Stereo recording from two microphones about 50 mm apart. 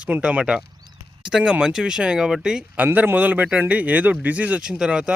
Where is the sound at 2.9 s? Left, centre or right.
Right.